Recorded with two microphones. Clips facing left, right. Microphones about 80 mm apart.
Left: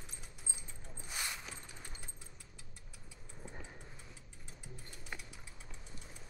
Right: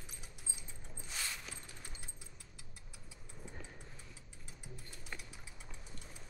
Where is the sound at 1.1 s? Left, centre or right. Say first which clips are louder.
Left 2 dB; centre.